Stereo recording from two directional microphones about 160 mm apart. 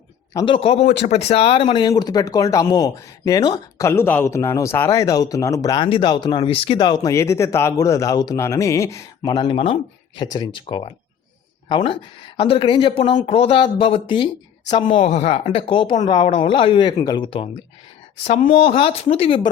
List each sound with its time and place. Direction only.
0.3 s speech: 35° left (ahead or behind)
12.4 s speech: 35° left (ahead or behind)
14.8 s speech: 45° left (ahead or behind)